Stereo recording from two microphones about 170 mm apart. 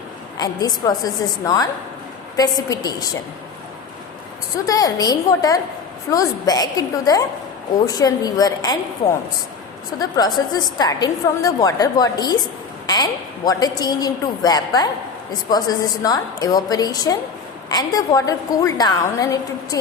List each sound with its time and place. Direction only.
0.3 s a woman's voice: 25° left (ahead or behind)
4.6 s a woman's voice: 20° left (ahead or behind)
10.0 s a woman's voice: 25° left (ahead or behind)